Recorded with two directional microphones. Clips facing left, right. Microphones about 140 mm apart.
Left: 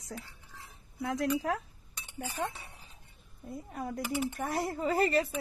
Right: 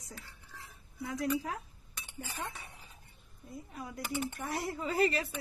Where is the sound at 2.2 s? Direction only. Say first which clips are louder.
Left 7 dB; 25° left (ahead or behind).